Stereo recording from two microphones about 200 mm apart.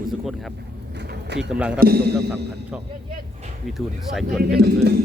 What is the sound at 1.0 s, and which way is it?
Pigeon, 60° right (ahead or behind).